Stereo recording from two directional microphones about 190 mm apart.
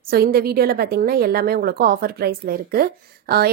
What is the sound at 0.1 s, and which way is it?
A woman's voice, 50° right (ahead or behind).